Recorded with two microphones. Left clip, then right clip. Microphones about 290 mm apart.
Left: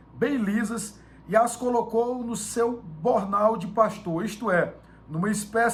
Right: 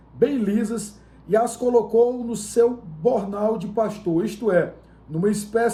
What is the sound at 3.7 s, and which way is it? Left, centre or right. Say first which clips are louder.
Speech: right 1 dB; centre.